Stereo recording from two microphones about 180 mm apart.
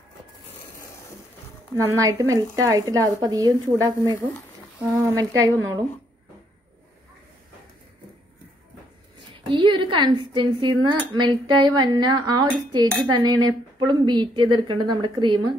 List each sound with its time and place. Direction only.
1.8 s a woman's voice: 20° right (ahead or behind)
9.5 s speech: 30° right (ahead or behind)